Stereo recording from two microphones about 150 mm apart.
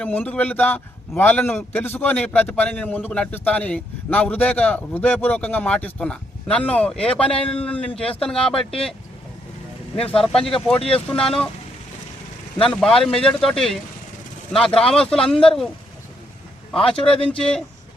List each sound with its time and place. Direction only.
0.0 s a man's voice: 10° left (ahead or behind)
10.1 s speech: 40° left (ahead or behind)
11.1 s speech: 5° left (ahead or behind)
12.6 s speech: 5° left (ahead or behind)
16.7 s speech: 5° left (ahead or behind)
17.0 s speech: 40° left (ahead or behind)
17.2 s speech: 5° left (ahead or behind)